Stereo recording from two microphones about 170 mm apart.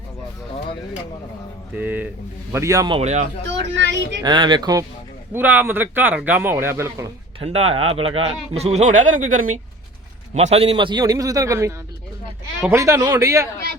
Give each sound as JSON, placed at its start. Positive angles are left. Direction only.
{"t": 1.7, "sound": "a man's voice", "side_deg": -10}
{"t": 2.9, "sound": "speech", "side_deg": -40}
{"t": 3.8, "sound": "speech", "side_deg": -90}
{"t": 4.2, "sound": "a man's voice", "side_deg": -25}
{"t": 5.3, "sound": "a man's voice", "side_deg": -10}
{"t": 7.3, "sound": "speech", "side_deg": -35}
{"t": 10.3, "sound": "a man's voice", "side_deg": -40}